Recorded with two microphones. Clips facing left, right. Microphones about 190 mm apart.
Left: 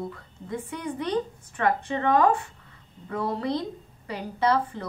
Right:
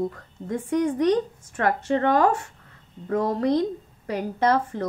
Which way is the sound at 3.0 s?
40° right (ahead or behind).